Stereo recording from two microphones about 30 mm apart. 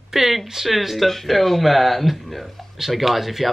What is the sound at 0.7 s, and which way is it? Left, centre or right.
Speech, centre.